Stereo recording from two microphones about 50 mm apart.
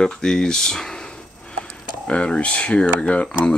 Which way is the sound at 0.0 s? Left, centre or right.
Centre.